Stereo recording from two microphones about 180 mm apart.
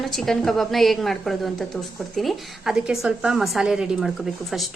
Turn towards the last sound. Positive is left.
turn(degrees=0)  # may be behind; listen again after turning